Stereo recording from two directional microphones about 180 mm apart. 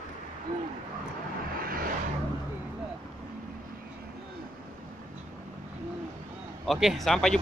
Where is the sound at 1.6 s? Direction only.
55° right (ahead or behind).